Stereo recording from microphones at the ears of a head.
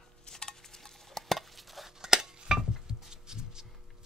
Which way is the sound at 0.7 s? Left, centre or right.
Centre.